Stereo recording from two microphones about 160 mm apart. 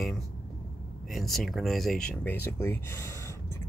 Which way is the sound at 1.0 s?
Centre (ahead or behind).